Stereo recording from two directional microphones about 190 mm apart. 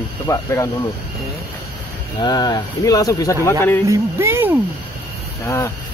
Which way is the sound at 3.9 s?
15° right (ahead or behind).